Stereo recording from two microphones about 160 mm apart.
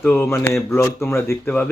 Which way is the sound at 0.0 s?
10° left (ahead or behind).